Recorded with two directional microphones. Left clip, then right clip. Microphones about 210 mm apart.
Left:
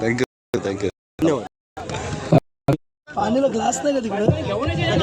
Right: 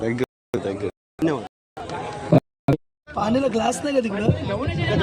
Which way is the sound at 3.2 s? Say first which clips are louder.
Left 2 dB; 40° right (ahead or behind).